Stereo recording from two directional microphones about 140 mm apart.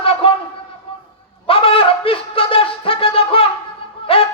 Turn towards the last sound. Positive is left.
turn(degrees=40)  # may be behind; listen again after turning